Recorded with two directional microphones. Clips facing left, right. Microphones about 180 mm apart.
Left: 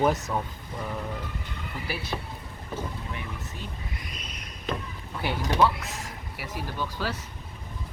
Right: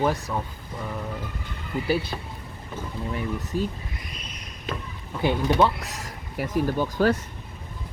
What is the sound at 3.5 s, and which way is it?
Speech, 35° right (ahead or behind).